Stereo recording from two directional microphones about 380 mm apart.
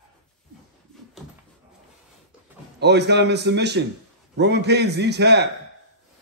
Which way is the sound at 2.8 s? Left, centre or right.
Right.